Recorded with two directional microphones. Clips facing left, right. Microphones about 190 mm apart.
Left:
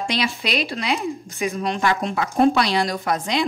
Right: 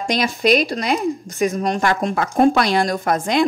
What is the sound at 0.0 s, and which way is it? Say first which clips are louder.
Speech: right 5 dB; 45° right (ahead or behind).